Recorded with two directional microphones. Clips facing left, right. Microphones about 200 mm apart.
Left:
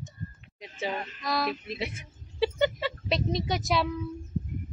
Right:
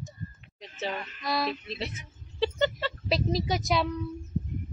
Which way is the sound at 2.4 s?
10° left (ahead or behind).